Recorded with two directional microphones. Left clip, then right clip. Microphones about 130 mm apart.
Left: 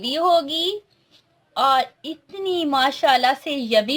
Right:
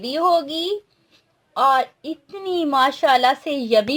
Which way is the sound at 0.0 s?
50° right (ahead or behind).